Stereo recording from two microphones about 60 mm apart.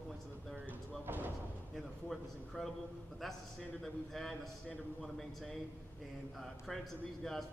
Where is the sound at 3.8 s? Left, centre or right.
Centre.